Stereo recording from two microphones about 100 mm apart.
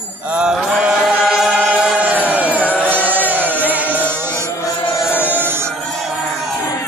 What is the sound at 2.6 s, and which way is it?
Music, 15° left (ahead or behind).